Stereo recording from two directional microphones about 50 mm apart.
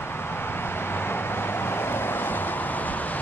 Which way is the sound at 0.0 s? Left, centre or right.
Left.